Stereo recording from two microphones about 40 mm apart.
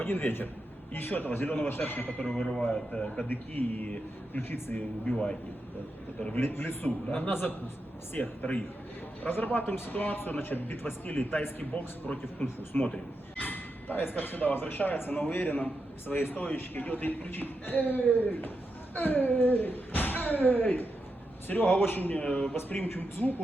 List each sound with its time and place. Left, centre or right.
0.0 s speech: left
2.5 s speech: centre
2.9 s a man's voice: left
3.2 s a man's voice: left
4.4 s speech: left
5.1 s a man's voice: centre
6.4 s speech: left
8.4 s a man's voice: left
9.3 s speech: left
9.9 s a man's voice: left
13.4 s a sound: left
14.2 s a man's voice: left
22.2 s a man's voice: left
22.5 s speech: left